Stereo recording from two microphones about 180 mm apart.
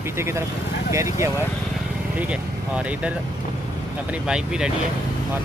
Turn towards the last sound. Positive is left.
turn(degrees=-5)  # may be behind; listen again after turning